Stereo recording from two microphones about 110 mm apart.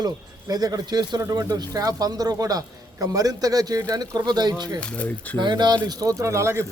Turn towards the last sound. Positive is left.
turn(degrees=-25)  # may be behind; listen again after turning